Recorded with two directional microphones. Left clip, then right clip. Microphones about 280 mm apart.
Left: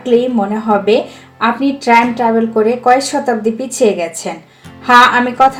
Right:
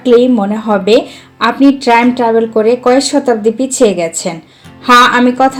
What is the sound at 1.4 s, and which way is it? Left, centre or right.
Speech, right.